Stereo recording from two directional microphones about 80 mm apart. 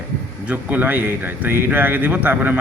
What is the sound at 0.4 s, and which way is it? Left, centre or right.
A man's voice, right.